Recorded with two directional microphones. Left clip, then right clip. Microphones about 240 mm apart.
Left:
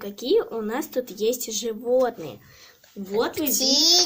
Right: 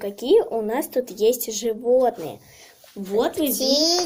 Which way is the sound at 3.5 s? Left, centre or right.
Left.